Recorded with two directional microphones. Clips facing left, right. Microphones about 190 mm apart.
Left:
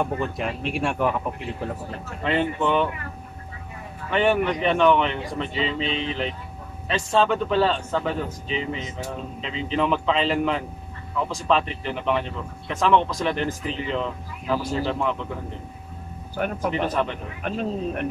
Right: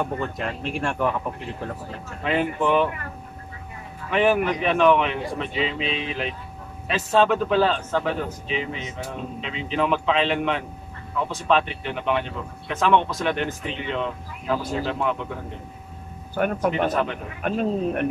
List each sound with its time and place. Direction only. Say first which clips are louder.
0.0 s speech: left 1 dB; 5° left (ahead or behind)
2.6 s speech: right 3 dB; 5° right (ahead or behind)
4.1 s speech: right 1 dB; 5° right (ahead or behind)
16.5 s speech: even; centre (ahead or behind)
17.4 s speech: right 4 dB; 50° right (ahead or behind)